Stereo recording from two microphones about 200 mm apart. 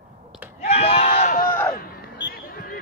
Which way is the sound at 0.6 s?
30° left (ahead or behind).